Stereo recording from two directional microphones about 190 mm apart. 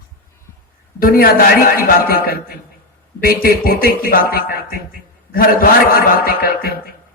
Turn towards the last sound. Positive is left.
turn(degrees=50)  # may be behind; listen again after turning